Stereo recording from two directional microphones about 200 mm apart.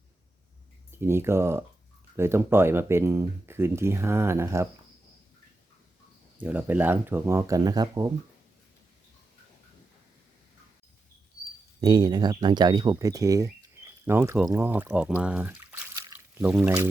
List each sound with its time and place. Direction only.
0.9 s speech: 10° right (ahead or behind)
6.4 s speech: 10° right (ahead or behind)
11.8 s speech: 20° right (ahead or behind)